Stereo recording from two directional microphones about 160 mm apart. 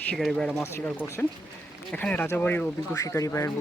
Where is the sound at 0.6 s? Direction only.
15° left (ahead or behind).